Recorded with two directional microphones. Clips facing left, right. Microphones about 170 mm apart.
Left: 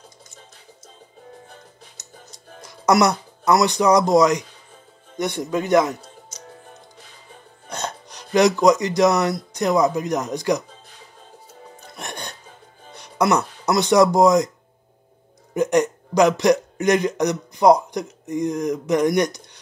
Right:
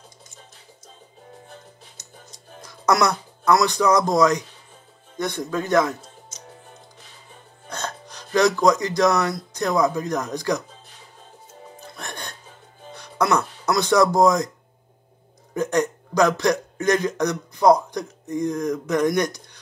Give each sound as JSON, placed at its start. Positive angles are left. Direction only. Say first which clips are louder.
{"t": 2.8, "sound": "speech", "louder": "left 3 dB", "side_deg": 15}
{"t": 7.7, "sound": "speech", "louder": "left 2 dB", "side_deg": 15}
{"t": 12.0, "sound": "music", "louder": "left 3 dB", "side_deg": 20}
{"t": 13.7, "sound": "speech", "louder": "left 3 dB", "side_deg": 20}
{"t": 15.5, "sound": "speech", "louder": "left 3 dB", "side_deg": 20}